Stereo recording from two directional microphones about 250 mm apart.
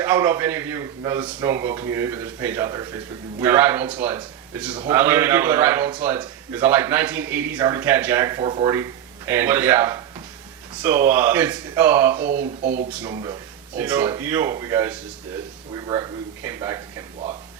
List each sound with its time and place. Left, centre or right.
0.0 s a man's voice: centre
12.3 s speech: right
12.9 s a man's voice: centre